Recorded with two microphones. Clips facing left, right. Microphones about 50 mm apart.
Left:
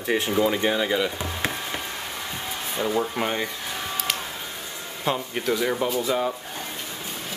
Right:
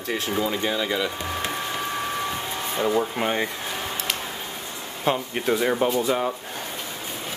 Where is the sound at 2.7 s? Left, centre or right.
Centre.